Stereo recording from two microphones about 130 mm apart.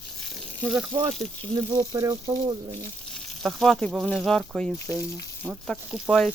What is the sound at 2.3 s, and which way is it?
Speech, 30° right (ahead or behind).